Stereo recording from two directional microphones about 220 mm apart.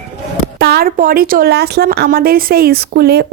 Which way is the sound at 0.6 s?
45° right (ahead or behind).